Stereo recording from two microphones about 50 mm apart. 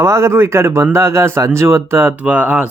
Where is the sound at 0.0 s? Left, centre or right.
Right.